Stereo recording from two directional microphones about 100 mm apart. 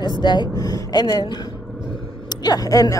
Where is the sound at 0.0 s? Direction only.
50° left (ahead or behind).